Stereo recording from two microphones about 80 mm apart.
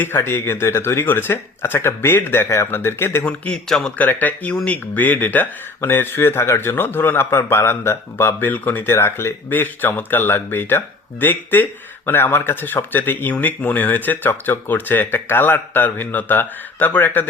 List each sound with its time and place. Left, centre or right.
0.0 s speech: left
3.2 s a man's voice: centre
3.9 s speech: left